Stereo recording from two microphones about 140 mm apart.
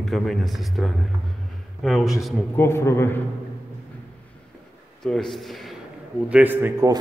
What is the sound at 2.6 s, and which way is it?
Speech, 20° left (ahead or behind).